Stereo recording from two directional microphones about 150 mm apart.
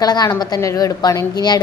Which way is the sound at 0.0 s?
25° left (ahead or behind).